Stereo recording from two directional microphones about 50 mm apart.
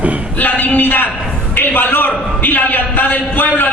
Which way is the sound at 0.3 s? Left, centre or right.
Left.